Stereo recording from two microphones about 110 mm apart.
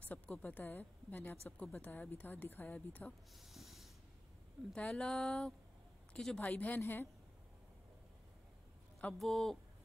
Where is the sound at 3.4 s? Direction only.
Centre (ahead or behind).